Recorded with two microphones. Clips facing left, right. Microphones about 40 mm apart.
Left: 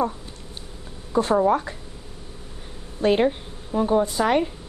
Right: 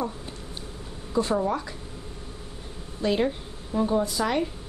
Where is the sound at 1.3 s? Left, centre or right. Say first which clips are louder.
Left 6 dB; left.